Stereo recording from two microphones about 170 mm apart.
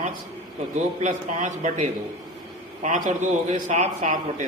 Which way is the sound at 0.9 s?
45° right (ahead or behind).